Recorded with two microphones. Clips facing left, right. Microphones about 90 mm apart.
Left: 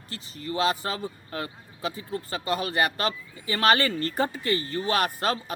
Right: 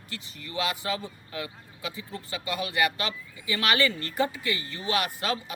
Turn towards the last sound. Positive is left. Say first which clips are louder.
# left 4 dB
turn(degrees=40)  # may be behind; listen again after turning